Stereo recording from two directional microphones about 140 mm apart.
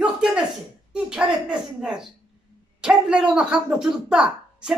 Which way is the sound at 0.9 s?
5° right (ahead or behind).